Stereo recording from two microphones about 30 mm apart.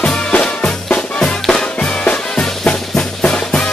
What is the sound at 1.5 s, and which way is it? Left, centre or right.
Music, left.